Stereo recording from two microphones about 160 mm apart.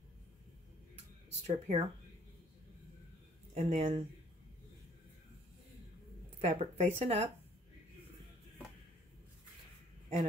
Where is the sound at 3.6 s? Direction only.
40° right (ahead or behind).